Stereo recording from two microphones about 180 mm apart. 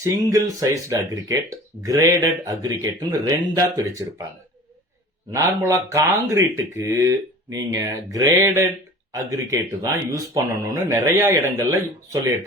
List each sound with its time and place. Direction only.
0.0 s speech: 15° right (ahead or behind)
5.3 s speech: 15° right (ahead or behind)